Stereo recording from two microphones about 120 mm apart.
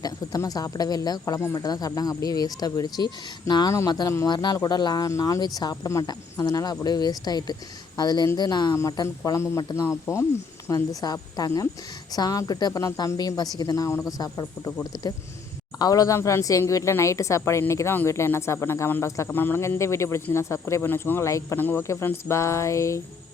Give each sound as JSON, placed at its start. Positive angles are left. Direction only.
{"t": 0.0, "sound": "speech", "side_deg": 30}